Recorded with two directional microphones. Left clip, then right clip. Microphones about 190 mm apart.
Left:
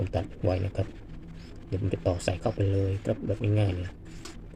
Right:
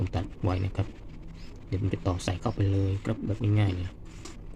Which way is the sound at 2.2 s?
20° right (ahead or behind).